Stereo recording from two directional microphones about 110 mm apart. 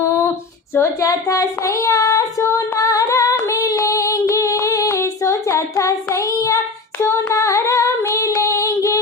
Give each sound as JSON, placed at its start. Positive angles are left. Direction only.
{"t": 0.7, "sound": "child singing", "side_deg": 25}
{"t": 7.0, "sound": "female singing", "side_deg": 25}